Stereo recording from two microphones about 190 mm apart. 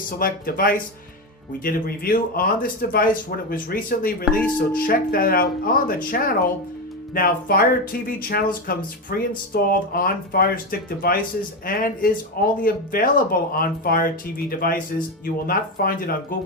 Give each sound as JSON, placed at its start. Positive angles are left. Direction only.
{"t": 0.2, "sound": "speech", "side_deg": 50}